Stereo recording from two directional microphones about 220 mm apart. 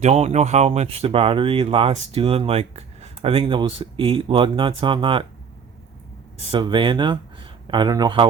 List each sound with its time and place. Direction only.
0.0 s speech: 30° right (ahead or behind)
6.5 s speech: 20° right (ahead or behind)